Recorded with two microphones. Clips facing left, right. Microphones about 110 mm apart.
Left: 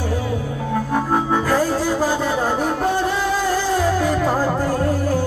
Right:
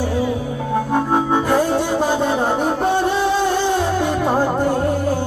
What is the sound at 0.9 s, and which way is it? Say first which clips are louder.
Music: right 2 dB; 25° right (ahead or behind).